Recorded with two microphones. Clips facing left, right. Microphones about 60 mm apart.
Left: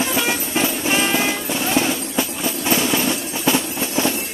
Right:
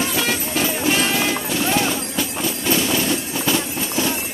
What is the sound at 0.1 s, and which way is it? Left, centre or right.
Music, centre.